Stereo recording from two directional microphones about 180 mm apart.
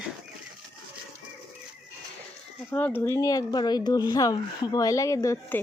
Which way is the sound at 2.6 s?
10° left (ahead or behind).